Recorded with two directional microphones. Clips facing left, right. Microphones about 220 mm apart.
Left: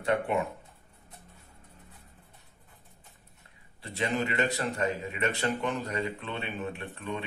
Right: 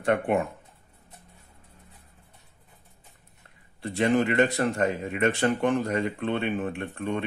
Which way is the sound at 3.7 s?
50° right (ahead or behind).